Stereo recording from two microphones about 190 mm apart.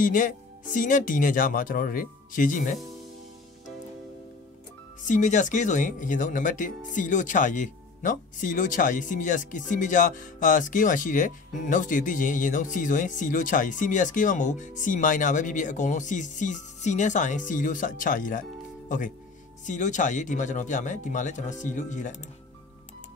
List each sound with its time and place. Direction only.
0.0 s speech: 45° left (ahead or behind)
5.0 s speech: 40° left (ahead or behind)